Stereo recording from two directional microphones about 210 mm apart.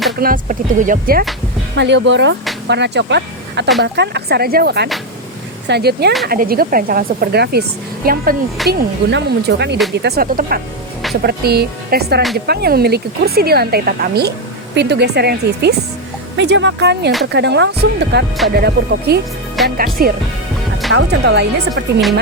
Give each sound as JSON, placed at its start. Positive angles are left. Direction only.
{"t": 0.2, "sound": "speech", "side_deg": -40}
{"t": 1.7, "sound": "speech", "side_deg": -55}
{"t": 20.9, "sound": "speech", "side_deg": -55}